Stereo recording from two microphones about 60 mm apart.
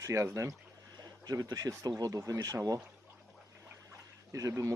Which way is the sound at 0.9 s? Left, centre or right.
Right.